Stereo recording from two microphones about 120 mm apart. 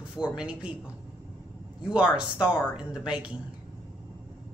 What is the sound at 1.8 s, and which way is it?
Speech, 10° right (ahead or behind).